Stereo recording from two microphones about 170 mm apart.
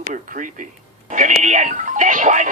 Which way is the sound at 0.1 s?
50° right (ahead or behind).